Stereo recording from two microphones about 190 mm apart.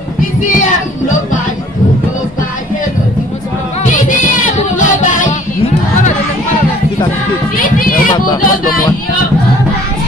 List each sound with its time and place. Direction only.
0.4 s speech: 40° left (ahead or behind)
3.8 s music: 45° left (ahead or behind)
7.5 s a sound: 50° left (ahead or behind)
8.4 s speech: 45° left (ahead or behind)